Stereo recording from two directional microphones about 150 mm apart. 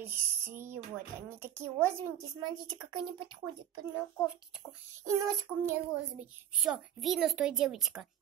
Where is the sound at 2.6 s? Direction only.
30° right (ahead or behind).